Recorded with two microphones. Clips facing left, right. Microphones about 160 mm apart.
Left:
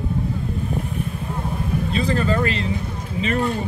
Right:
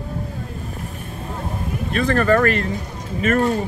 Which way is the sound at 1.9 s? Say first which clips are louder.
Right 6 dB; 60° right (ahead or behind).